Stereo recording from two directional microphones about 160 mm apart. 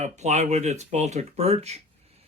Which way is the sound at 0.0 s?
45° right (ahead or behind).